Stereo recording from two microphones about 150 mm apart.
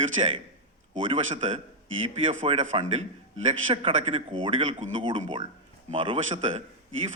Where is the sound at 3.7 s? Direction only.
40° right (ahead or behind).